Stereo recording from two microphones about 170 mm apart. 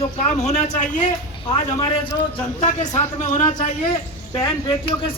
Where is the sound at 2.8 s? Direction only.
20° left (ahead or behind).